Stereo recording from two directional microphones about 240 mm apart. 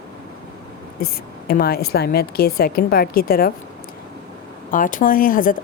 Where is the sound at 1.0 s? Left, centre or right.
Left.